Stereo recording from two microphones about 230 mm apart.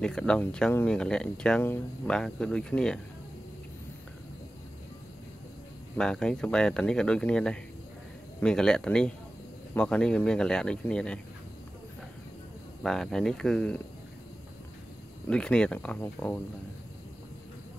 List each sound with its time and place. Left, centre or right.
0.0 s speech: centre
5.9 s speech: centre
12.8 s speech: centre
15.2 s speech: centre